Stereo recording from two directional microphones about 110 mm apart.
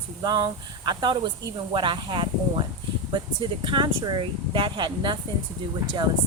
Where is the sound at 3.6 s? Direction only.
45° right (ahead or behind).